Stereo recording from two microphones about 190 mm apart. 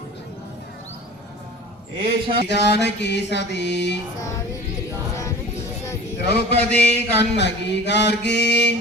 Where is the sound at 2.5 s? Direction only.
65° left (ahead or behind).